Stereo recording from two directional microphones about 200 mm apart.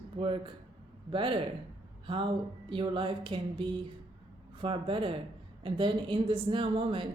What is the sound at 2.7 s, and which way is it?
A woman's voice, 25° right (ahead or behind).